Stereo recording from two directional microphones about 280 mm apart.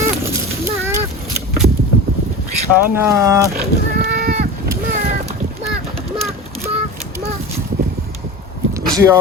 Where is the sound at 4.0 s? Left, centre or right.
Right.